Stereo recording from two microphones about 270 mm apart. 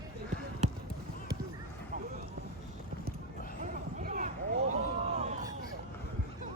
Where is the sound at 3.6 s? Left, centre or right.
Right.